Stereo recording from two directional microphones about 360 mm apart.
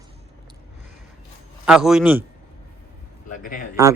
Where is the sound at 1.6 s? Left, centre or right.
Centre.